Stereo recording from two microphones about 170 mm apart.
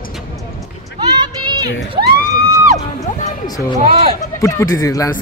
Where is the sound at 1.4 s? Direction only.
25° right (ahead or behind).